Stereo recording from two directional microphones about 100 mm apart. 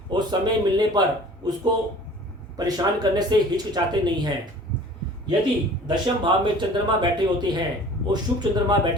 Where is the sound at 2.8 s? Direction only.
40° right (ahead or behind).